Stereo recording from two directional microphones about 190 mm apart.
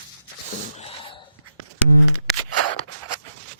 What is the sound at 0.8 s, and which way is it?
Gasp, 30° left (ahead or behind).